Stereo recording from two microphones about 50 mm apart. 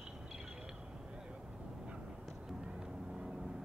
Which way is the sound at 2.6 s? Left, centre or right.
Centre.